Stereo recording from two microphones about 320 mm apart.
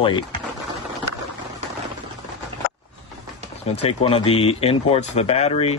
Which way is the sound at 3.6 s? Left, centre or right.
Centre.